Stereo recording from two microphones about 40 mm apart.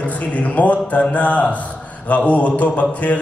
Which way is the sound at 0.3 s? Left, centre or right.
Left.